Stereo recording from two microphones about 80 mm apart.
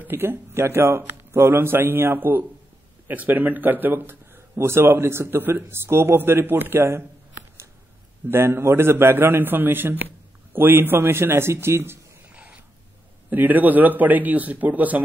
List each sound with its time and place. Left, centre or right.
0.0 s a man's voice: right
8.3 s a man's voice: right
12.3 s a sound: centre
13.3 s a man's voice: right